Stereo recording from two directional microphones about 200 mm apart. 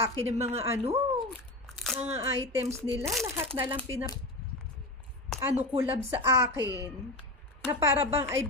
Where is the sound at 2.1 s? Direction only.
15° right (ahead or behind).